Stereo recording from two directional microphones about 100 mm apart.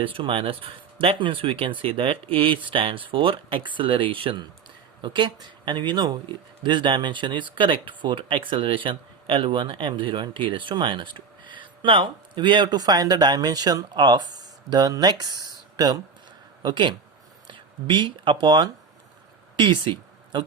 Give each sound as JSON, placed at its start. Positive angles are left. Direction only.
{"t": 0.0, "sound": "speech", "side_deg": -60}
{"t": 5.0, "sound": "speech", "side_deg": -50}